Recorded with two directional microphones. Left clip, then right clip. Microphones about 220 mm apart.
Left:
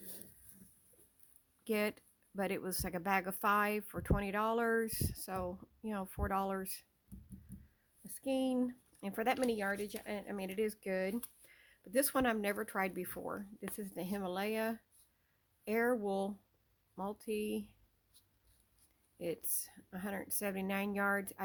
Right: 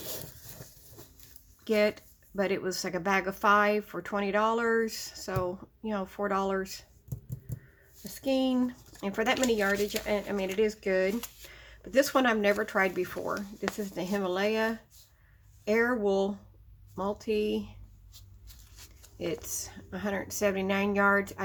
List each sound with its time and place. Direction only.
1.6 s speech: 45° left (ahead or behind)
8.1 s speech: 40° left (ahead or behind)
19.1 s speech: 40° left (ahead or behind)